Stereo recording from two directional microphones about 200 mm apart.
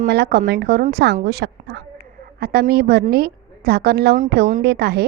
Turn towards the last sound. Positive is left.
turn(degrees=-55)  # may be behind; listen again after turning